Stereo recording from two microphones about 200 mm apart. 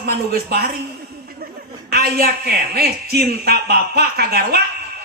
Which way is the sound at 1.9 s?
50° right (ahead or behind).